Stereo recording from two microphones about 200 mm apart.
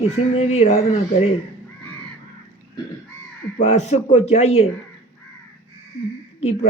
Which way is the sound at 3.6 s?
35° left (ahead or behind).